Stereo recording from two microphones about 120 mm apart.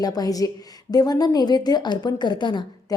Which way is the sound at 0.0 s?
30° left (ahead or behind).